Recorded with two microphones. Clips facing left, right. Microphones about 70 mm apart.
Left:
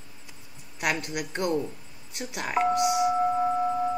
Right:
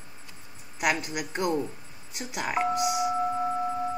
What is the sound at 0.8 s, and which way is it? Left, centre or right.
Speech, centre.